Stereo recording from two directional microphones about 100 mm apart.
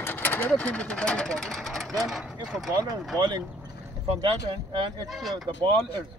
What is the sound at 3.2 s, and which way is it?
Speech, 45° right (ahead or behind).